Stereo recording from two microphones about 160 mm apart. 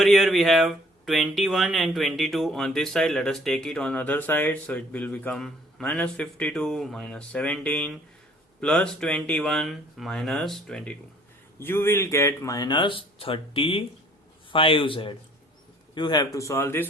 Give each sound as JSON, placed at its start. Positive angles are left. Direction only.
{"t": 0.0, "sound": "speech", "side_deg": 0}